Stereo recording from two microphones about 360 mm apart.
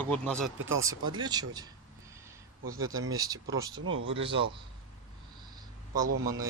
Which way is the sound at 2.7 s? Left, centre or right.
Right.